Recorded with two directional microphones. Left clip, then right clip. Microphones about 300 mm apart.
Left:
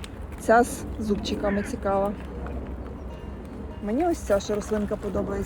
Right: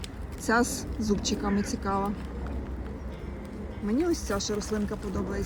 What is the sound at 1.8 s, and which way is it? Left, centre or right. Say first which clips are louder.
Speech: left 6 dB; centre.